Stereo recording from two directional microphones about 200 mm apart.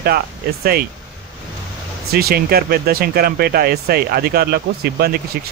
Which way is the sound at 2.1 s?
50° right (ahead or behind).